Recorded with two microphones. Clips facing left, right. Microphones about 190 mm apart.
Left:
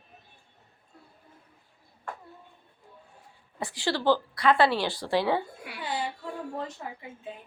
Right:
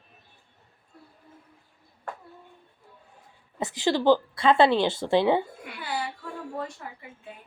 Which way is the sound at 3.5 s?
20° right (ahead or behind).